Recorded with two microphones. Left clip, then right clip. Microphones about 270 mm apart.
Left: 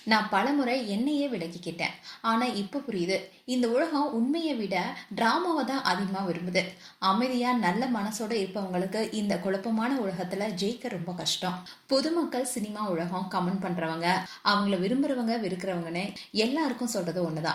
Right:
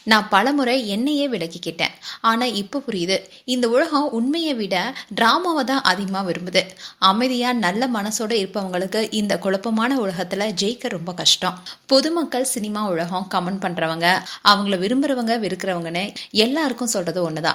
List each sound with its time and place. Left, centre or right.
0.1 s a woman's voice: right